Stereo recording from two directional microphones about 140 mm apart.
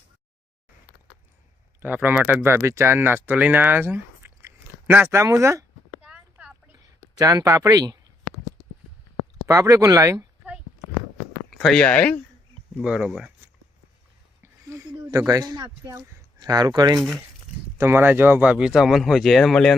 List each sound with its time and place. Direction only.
1.8 s speech: 15° right (ahead or behind)
6.1 s a sound: 10° right (ahead or behind)
7.2 s speech: 25° right (ahead or behind)
9.5 s speech: 25° right (ahead or behind)
11.5 s speech: centre (ahead or behind)
12.8 s speech: 5° right (ahead or behind)
14.4 s a sound: 20° right (ahead or behind)
15.0 s speech: 25° right (ahead or behind)
17.7 s speech: 15° right (ahead or behind); by 19.7 s 5° left (ahead or behind)